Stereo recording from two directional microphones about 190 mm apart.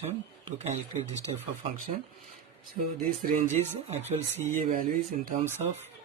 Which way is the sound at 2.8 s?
45° right (ahead or behind).